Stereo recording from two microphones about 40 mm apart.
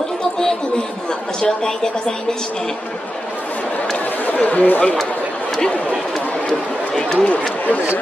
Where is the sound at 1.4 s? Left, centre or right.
Centre.